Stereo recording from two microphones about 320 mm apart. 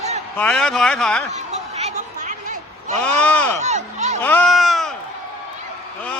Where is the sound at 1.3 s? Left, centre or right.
Centre.